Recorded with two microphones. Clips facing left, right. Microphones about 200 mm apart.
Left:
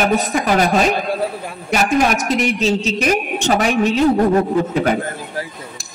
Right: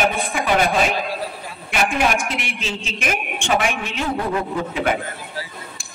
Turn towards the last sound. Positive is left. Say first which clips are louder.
# left 5 dB
turn(degrees=40)  # may be behind; listen again after turning